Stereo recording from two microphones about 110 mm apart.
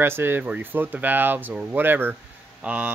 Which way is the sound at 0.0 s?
20° right (ahead or behind).